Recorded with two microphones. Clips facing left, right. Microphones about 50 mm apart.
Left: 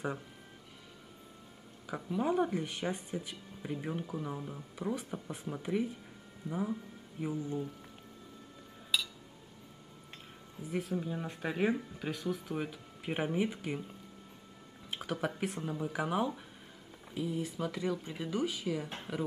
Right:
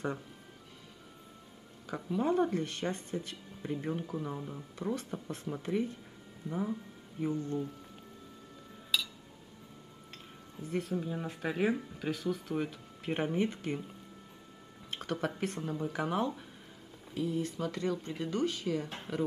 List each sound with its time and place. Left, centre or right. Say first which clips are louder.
1.9 s speech: right 1 dB; centre
8.9 s music: even; centre
10.6 s speech: right 1 dB; centre